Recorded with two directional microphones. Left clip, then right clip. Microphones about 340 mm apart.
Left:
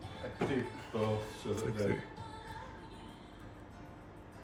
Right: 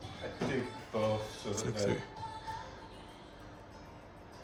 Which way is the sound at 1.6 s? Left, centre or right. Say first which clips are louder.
Right 2 dB; centre.